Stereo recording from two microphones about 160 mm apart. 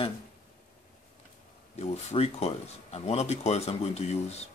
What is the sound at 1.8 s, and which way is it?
Speech, 45° left (ahead or behind).